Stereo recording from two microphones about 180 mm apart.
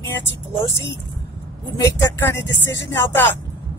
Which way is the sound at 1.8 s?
15° left (ahead or behind).